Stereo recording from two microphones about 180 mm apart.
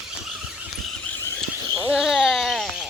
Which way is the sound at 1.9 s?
5° right (ahead or behind).